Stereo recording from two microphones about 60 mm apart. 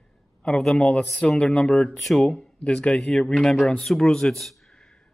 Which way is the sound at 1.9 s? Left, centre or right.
Centre.